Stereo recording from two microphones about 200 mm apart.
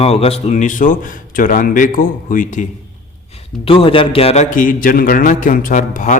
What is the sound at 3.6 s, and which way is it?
A man's voice, 25° left (ahead or behind).